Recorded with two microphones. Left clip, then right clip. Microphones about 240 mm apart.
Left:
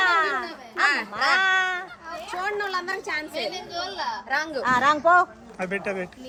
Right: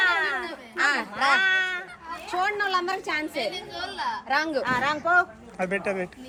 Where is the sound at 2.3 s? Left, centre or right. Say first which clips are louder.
Right 3 dB; right.